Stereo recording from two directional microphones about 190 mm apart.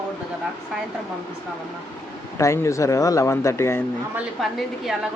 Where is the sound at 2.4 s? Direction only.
15° left (ahead or behind).